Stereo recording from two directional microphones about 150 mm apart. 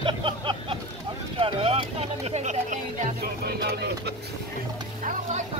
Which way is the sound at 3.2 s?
90° right.